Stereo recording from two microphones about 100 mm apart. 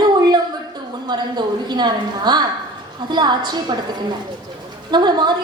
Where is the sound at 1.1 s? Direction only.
45° right (ahead or behind).